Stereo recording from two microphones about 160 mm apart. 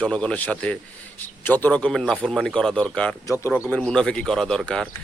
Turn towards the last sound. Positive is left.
turn(degrees=5)  # may be behind; listen again after turning